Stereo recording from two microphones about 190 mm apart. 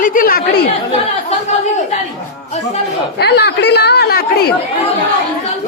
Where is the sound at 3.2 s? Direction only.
60° left (ahead or behind).